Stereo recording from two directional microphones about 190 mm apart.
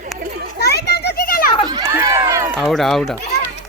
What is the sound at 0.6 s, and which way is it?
Children playing, 60° left (ahead or behind).